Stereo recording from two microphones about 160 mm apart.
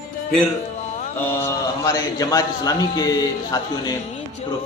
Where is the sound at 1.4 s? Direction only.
20° left (ahead or behind).